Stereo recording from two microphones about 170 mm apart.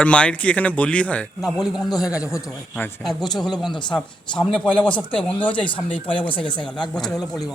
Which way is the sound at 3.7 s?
25° left (ahead or behind).